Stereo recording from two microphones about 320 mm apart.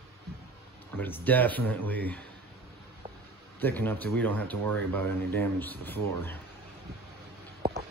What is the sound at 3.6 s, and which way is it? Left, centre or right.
Speech, centre.